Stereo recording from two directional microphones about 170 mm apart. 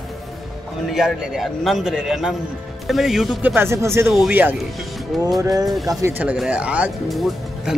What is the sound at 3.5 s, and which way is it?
Speech, 15° right (ahead or behind).